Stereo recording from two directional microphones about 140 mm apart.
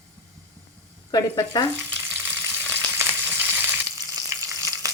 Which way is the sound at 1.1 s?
25° left (ahead or behind).